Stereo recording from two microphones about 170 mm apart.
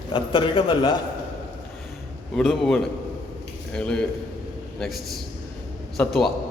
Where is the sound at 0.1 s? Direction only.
30° left (ahead or behind).